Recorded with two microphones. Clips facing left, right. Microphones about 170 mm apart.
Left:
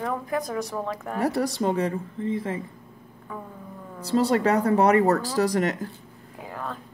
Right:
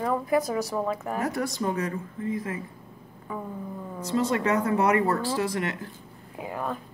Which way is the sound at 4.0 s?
35° left (ahead or behind).